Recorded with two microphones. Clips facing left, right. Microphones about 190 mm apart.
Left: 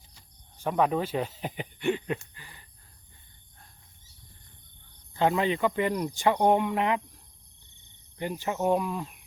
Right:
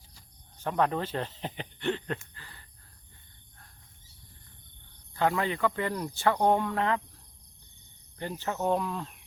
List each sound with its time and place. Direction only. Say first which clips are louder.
0.6 s speech: left 2 dB; 10° left (ahead or behind)
5.1 s speech: left 3 dB; 20° left (ahead or behind)
8.2 s speech: left 3 dB; 15° left (ahead or behind)